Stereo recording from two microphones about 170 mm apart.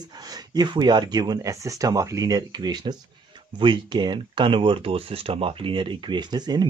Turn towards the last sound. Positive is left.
turn(degrees=-25)  # may be behind; listen again after turning